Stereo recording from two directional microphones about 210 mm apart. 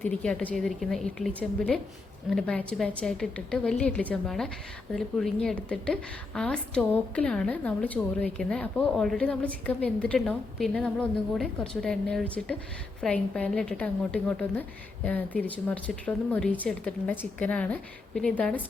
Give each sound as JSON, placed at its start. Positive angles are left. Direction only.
{"t": 0.0, "sound": "a woman's voice", "side_deg": 5}